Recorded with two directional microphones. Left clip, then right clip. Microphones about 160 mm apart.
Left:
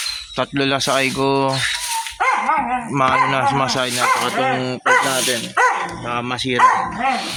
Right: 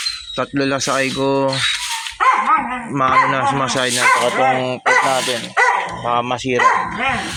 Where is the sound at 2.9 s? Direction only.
10° left (ahead or behind).